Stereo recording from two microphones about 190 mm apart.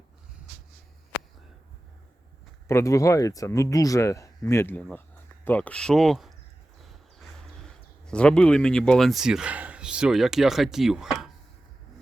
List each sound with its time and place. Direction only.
2.6 s speech: 15° left (ahead or behind); by 11.3 s centre (ahead or behind)